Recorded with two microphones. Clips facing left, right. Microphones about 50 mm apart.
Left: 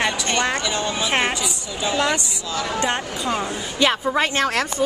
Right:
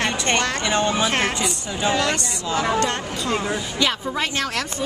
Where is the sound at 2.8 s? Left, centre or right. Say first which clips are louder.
Left 1 dB; centre.